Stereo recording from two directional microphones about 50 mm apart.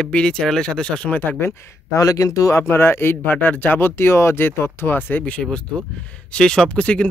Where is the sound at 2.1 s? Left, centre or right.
Left.